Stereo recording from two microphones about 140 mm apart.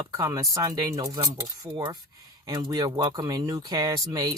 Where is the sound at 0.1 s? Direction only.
20° right (ahead or behind).